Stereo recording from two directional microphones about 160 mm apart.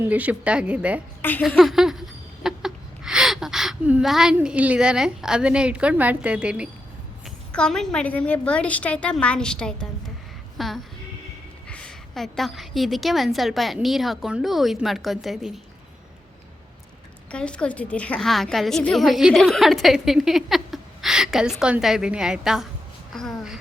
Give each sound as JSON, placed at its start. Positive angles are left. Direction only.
{"t": 0.0, "sound": "a woman's voice", "side_deg": -10}
{"t": 1.4, "sound": "a sound", "side_deg": -5}
{"t": 7.5, "sound": "a woman's voice", "side_deg": 5}
{"t": 10.6, "sound": "music", "side_deg": 0}
{"t": 11.7, "sound": "a woman's voice", "side_deg": 5}
{"t": 17.3, "sound": "a woman's voice", "side_deg": 5}